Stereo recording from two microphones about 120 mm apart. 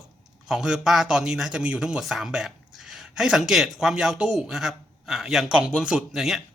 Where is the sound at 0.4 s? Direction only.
5° right (ahead or behind).